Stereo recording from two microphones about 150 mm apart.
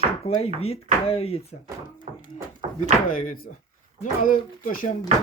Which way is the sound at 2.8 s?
60° left (ahead or behind).